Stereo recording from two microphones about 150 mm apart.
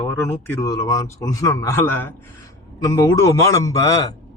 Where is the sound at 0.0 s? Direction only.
15° left (ahead or behind).